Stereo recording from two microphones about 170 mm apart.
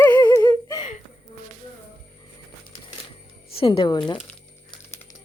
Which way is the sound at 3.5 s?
35° left (ahead or behind).